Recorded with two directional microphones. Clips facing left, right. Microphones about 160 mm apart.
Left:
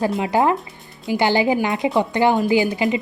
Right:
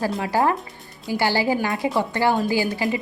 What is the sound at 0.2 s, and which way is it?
A woman's voice, 20° left (ahead or behind).